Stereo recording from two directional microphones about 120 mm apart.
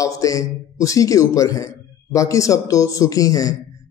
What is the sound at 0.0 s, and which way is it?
Speech, 30° left (ahead or behind).